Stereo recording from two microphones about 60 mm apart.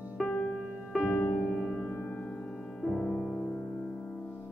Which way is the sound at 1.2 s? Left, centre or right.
Left.